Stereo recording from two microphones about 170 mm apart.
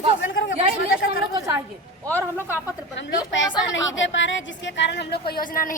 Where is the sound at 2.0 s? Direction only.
10° left (ahead or behind).